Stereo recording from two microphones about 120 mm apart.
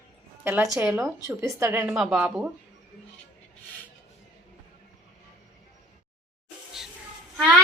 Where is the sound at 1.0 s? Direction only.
25° right (ahead or behind).